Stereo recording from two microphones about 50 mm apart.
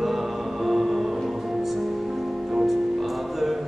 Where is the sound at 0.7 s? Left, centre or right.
Centre.